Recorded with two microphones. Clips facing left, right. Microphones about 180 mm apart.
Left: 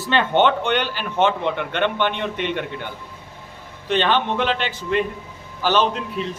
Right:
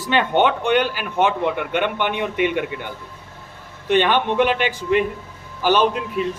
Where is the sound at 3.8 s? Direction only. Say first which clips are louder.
Right 2 dB; 15° right (ahead or behind).